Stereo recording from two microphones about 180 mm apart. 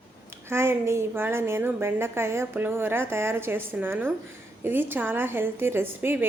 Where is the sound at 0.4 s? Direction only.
15° right (ahead or behind).